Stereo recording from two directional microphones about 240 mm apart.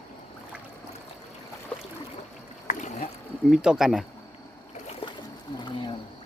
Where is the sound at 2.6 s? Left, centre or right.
Left.